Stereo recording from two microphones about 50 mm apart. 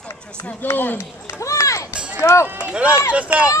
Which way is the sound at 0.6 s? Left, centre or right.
Left.